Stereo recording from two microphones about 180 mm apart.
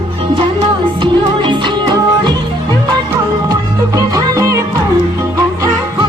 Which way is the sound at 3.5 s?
20° right (ahead or behind).